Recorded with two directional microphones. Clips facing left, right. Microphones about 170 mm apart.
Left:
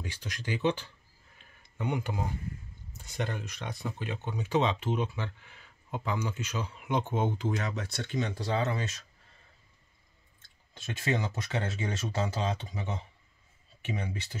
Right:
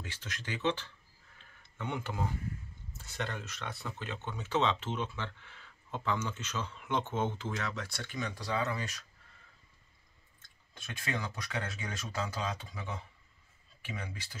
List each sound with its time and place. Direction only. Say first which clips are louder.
0.0 s speech: left 5 dB; 15° left (ahead or behind)
1.4 s tick-tock: left 6 dB; 15° left (ahead or behind)
3.0 s speech: left 4 dB; 15° left (ahead or behind)
10.7 s speech: left 7 dB; 25° left (ahead or behind)